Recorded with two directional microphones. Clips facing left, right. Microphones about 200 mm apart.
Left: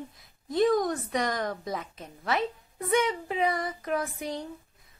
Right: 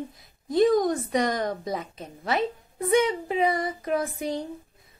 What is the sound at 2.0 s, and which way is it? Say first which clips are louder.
Speech: right 2 dB; 25° right (ahead or behind).